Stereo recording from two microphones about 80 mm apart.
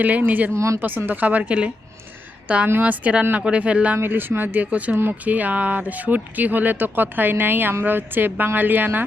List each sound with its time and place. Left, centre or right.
0.0 s speech: right
0.5 s speech: right
1.0 s speech: right
3.9 s speech: right